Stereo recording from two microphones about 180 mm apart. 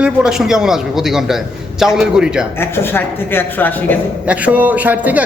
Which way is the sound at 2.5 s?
10° left (ahead or behind).